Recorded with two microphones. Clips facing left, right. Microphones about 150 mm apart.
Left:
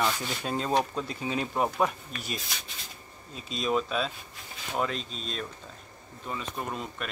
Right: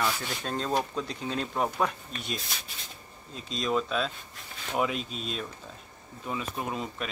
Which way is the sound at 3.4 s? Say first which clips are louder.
Even; 5° left (ahead or behind).